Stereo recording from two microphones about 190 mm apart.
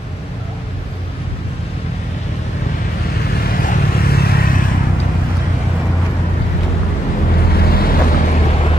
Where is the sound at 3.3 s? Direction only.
50° left (ahead or behind).